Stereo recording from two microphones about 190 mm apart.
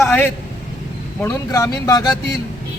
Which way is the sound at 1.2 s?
15° left (ahead or behind).